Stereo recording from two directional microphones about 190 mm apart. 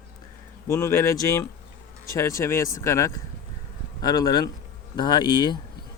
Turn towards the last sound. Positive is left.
turn(degrees=20)  # may be behind; listen again after turning